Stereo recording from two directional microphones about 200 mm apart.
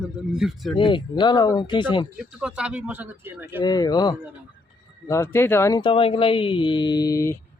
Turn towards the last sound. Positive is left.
turn(degrees=15)  # may be behind; listen again after turning